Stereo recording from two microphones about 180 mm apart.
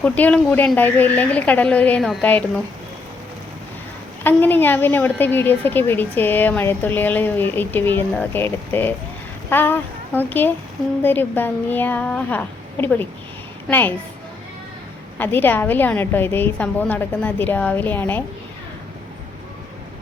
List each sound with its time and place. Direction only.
0.0 s a woman's voice: 5° left (ahead or behind)
4.2 s a woman's voice: 10° left (ahead or behind)
15.2 s a woman's voice: 10° left (ahead or behind)